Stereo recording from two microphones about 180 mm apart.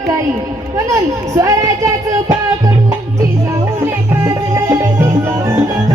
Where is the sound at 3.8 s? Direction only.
20° right (ahead or behind).